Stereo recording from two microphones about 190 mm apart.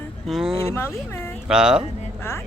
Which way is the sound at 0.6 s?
15° left (ahead or behind).